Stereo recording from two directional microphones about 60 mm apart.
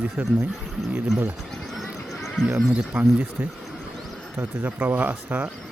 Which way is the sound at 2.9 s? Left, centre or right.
Right.